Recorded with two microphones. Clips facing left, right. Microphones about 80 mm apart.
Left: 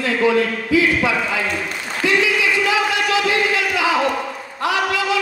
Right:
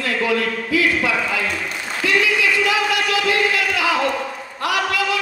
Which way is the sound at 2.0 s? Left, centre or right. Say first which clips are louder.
Left 1 dB; left.